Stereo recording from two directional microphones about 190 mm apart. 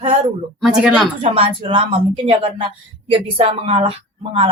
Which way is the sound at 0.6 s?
5° right (ahead or behind).